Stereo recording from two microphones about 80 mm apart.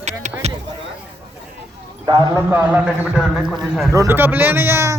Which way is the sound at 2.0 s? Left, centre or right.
Right.